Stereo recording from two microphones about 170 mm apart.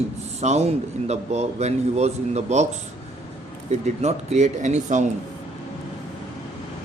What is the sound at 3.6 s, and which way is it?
Speech, 40° right (ahead or behind).